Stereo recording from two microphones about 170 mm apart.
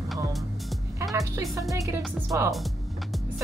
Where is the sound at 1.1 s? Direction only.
20° right (ahead or behind).